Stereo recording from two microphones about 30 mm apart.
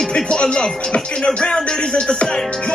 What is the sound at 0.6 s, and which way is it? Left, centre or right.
Speech, left.